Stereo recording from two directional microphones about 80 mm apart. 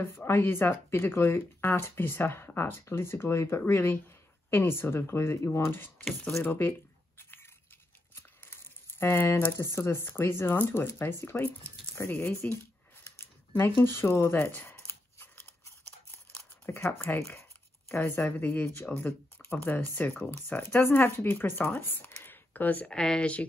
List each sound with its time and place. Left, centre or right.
0.0 s speech: left
8.1 s biting: left
9.0 s speech: left
13.6 s speech: left
16.3 s a sound: left
16.8 s speech: left
17.4 s a sound: left
18.0 s speech: left
18.9 s speech: centre
19.5 s speech: left